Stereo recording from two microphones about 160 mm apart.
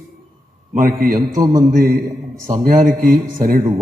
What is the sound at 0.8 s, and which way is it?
Speech, 60° right (ahead or behind).